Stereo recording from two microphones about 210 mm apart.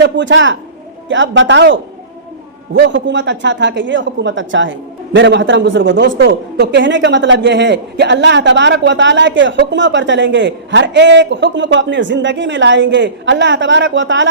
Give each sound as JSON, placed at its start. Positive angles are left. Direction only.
{"t": 0.0, "sound": "a man's voice", "side_deg": -60}